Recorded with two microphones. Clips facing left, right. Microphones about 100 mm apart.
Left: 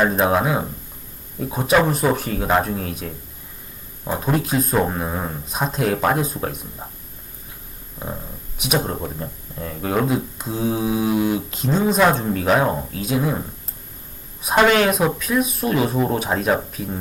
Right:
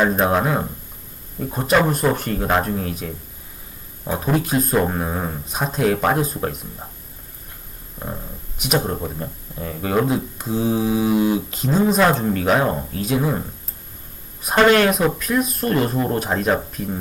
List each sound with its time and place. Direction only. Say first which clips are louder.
0.0 s speech: even; centre (ahead or behind)
4.2 s speech: right 1 dB; centre (ahead or behind)
8.0 s speech: even; 15° left (ahead or behind)
8.5 s speech: right 1 dB; centre (ahead or behind)
14.4 s speech: right 1 dB; 5° left (ahead or behind)